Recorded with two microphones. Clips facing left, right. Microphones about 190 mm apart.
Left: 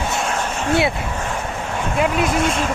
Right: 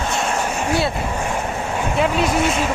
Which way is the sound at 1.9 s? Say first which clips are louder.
Even; centre (ahead or behind).